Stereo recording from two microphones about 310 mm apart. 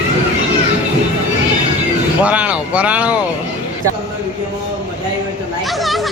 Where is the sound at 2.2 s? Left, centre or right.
Centre.